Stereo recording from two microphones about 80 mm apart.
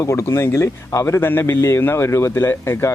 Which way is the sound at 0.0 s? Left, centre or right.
Left.